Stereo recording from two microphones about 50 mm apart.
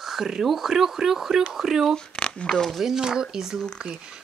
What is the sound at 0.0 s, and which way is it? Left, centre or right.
Speech, centre.